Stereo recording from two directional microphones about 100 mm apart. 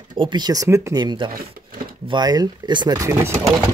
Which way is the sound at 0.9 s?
50° right (ahead or behind).